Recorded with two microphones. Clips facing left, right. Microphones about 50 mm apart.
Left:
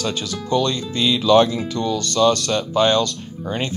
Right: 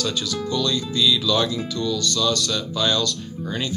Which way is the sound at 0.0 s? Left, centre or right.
Left.